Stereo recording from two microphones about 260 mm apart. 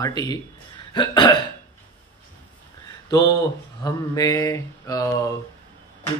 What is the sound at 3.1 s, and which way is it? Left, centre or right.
Speech, centre.